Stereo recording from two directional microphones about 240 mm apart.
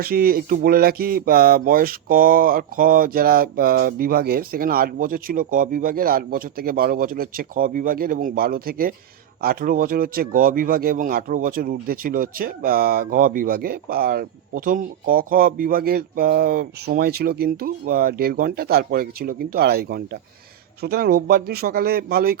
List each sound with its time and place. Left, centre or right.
0.0 s speech: right